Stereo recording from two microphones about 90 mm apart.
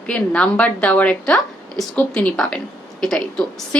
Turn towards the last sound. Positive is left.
turn(degrees=10)  # may be behind; listen again after turning